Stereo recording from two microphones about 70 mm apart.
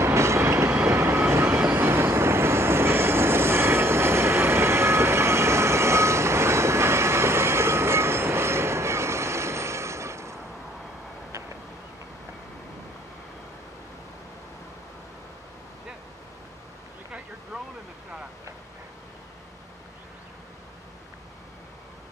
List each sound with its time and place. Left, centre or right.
0.0 s train: right
0.8 s vehicle: right
1.7 s train: right